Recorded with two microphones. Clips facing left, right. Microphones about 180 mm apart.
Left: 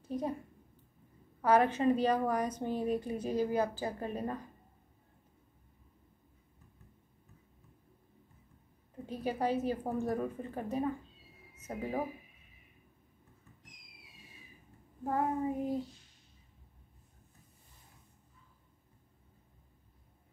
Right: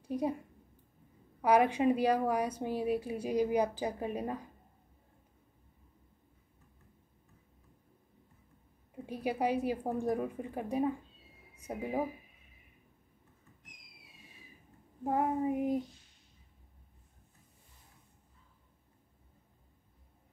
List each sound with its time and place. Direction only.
0.0 s a woman's voice: 15° right (ahead or behind)
1.4 s a woman's voice: 15° right (ahead or behind)
9.0 s a woman's voice: 10° right (ahead or behind)
15.0 s a woman's voice: 15° right (ahead or behind)